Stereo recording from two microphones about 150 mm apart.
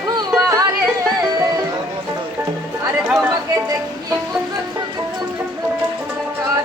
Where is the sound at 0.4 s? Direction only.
25° right (ahead or behind).